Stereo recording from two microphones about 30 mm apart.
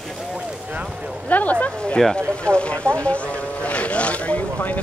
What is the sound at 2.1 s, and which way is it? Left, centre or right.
Speech, left.